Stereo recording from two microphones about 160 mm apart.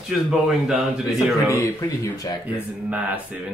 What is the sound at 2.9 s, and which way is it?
Speech, 10° right (ahead or behind).